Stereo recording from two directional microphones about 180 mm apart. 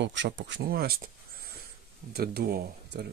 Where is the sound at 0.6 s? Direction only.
55° right (ahead or behind).